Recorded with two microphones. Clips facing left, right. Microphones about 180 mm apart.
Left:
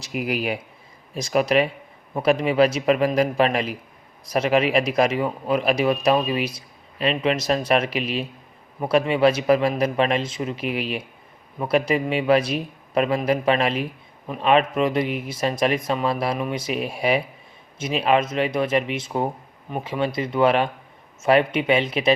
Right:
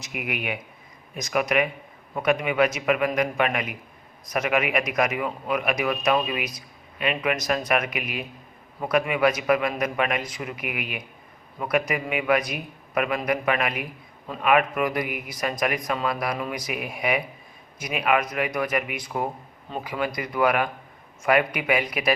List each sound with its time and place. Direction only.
0.0 s a man's voice: 30° left (ahead or behind)